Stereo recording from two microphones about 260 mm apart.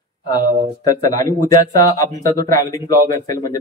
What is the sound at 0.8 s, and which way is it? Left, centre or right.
Speech, centre.